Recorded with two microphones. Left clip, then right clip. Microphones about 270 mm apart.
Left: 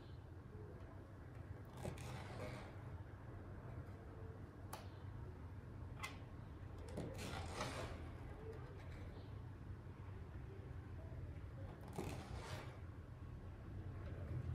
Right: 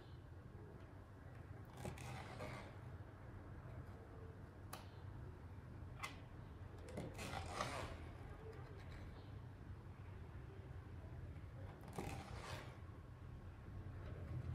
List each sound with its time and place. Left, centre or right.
1.8 s vehicle: centre
6.9 s a sound: centre
11.9 s vehicle: centre